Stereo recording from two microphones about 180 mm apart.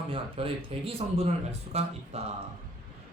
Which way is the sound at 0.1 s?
30° right (ahead or behind).